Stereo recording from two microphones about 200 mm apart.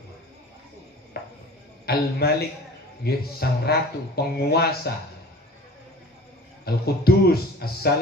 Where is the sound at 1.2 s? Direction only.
50° left (ahead or behind).